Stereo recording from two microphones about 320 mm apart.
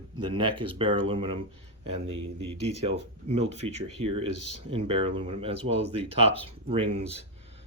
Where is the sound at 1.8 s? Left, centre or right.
Right.